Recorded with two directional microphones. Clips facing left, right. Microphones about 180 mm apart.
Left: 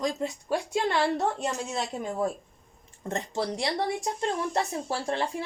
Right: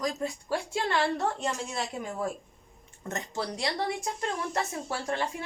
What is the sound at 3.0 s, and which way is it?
A woman's voice, 30° left (ahead or behind).